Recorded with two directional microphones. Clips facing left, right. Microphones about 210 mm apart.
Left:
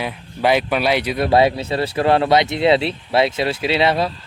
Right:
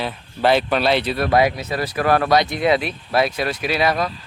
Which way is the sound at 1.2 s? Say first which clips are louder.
Left 4 dB; 30° left (ahead or behind).